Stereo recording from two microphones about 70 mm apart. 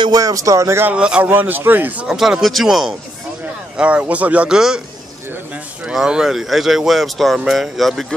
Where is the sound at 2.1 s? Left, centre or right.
Centre.